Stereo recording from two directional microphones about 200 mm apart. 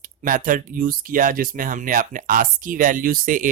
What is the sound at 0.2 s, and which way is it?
Speech, 40° right (ahead or behind).